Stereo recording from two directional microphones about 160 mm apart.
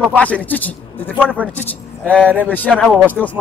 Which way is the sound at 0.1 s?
10° left (ahead or behind).